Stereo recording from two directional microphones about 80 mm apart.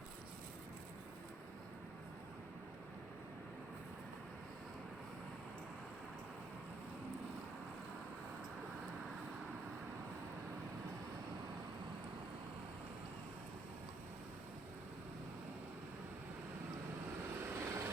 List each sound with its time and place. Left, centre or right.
17.5 s vehicle: right